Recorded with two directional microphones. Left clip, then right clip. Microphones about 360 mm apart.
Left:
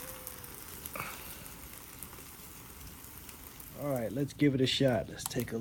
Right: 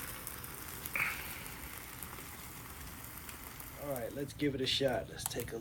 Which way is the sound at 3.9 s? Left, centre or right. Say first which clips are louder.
Left 8 dB; centre.